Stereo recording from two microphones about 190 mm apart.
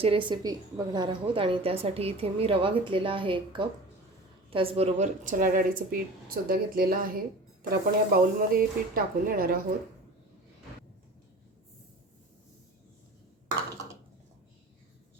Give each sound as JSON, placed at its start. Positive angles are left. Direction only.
{"t": 0.0, "sound": "a woman's voice", "side_deg": -25}